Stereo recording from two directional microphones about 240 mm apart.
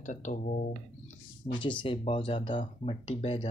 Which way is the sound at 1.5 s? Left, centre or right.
Centre.